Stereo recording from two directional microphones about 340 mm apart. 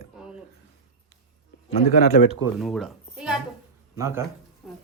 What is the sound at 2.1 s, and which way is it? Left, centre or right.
Speech, left.